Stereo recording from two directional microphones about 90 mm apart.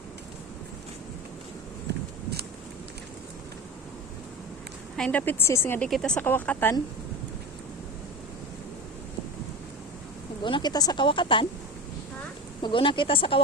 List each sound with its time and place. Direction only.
4.9 s speech: 10° left (ahead or behind)
5.2 s speech: 20° left (ahead or behind)
5.9 s speech: 5° left (ahead or behind)
6.1 s speech: 20° left (ahead or behind)
10.4 s speech: 60° left (ahead or behind)
11.0 s speech: 70° left (ahead or behind)
12.6 s speech: 65° left (ahead or behind)